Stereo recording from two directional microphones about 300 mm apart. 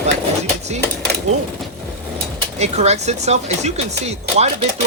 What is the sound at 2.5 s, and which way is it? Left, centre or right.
Speech, right.